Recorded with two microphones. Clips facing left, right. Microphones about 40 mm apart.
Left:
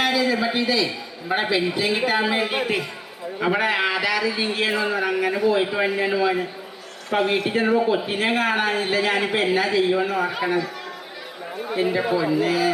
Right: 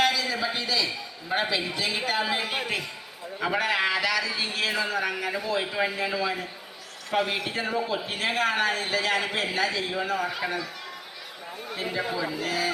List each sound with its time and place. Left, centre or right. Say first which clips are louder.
0.0 s a sound: left 4 dB; centre
1.3 s a man's voice: left 5 dB; centre
7.1 s a man's voice: left 6 dB; left
11.7 s a man's voice: left 8 dB; centre